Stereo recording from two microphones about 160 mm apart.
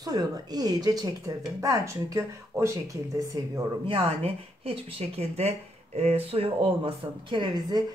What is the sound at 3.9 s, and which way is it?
Speech, 35° right (ahead or behind).